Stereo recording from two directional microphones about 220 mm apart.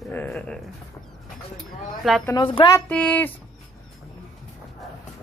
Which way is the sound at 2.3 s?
25° left (ahead or behind).